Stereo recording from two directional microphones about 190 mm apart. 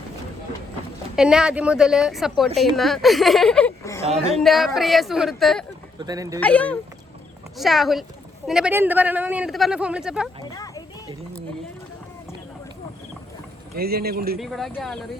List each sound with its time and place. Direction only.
1.1 s speech: 5° right (ahead or behind)
4.4 s speech: centre (ahead or behind)
6.0 s speech: 20° right (ahead or behind)
6.4 s speech: 5° left (ahead or behind)
10.5 s a sound: 20° left (ahead or behind)
13.7 s speech: 55° right (ahead or behind)
14.3 s speech: centre (ahead or behind)